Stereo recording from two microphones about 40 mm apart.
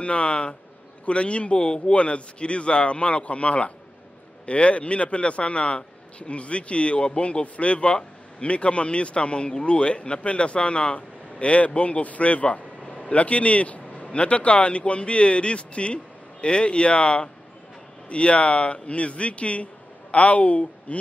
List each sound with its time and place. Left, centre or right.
0.0 s a man's voice: left